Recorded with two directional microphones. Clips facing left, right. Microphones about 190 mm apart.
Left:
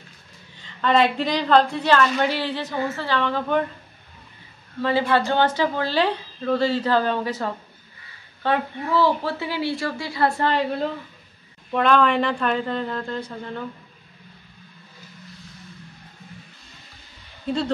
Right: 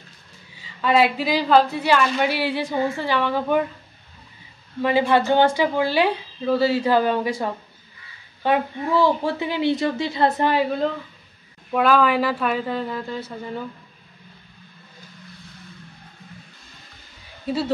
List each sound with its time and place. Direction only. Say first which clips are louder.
0.6 s a woman's voice: right 1 dB; 5° right (ahead or behind)
4.8 s a woman's voice: right 2 dB; 15° right (ahead or behind)
11.7 s a woman's voice: right 1 dB; 5° right (ahead or behind)
17.5 s a woman's voice: right 1 dB; 5° right (ahead or behind)